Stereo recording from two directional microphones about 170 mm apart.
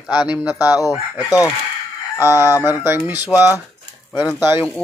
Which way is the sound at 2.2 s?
15° right (ahead or behind).